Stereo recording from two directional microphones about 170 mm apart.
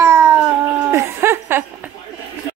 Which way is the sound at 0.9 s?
15° right (ahead or behind).